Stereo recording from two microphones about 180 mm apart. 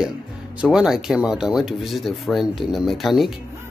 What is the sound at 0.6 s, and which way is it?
Speech, 5° right (ahead or behind).